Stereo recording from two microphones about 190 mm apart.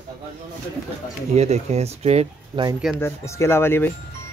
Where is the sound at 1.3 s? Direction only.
35° right (ahead or behind).